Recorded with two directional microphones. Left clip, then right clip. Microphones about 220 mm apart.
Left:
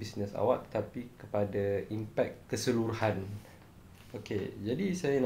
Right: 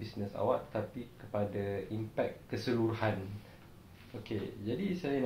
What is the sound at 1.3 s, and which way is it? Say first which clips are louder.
Speech: left 4 dB; 50° left (ahead or behind).